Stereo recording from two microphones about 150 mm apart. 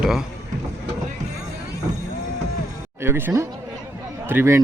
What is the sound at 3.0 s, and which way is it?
Speech, 15° right (ahead or behind).